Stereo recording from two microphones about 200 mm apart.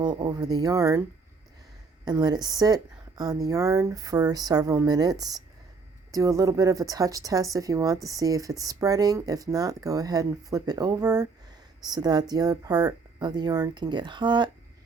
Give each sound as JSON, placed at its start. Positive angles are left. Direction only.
{"t": 0.0, "sound": "speech", "side_deg": -20}
{"t": 2.0, "sound": "speech", "side_deg": -20}